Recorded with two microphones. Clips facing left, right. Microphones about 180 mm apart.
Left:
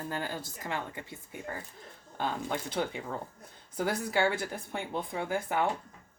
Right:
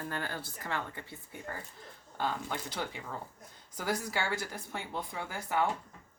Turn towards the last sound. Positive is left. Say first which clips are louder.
# left 3 dB
turn(degrees=20)  # may be behind; listen again after turning